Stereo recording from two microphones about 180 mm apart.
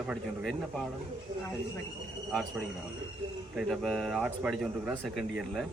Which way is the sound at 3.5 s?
Centre (ahead or behind).